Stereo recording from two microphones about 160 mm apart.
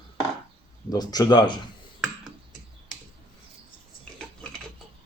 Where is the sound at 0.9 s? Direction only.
25° left (ahead or behind).